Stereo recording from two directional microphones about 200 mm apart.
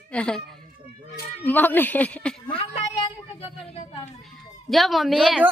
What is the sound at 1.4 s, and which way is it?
Speech, 10° left (ahead or behind).